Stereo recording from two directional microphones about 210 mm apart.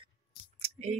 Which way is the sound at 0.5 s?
30° right (ahead or behind).